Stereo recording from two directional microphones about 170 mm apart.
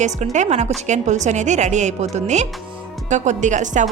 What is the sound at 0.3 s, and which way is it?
A woman's voice, 40° right (ahead or behind).